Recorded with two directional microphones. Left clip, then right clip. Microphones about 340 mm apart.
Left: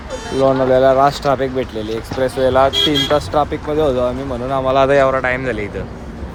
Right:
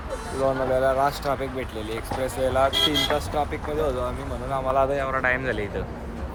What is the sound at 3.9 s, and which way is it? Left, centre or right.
Speech, left.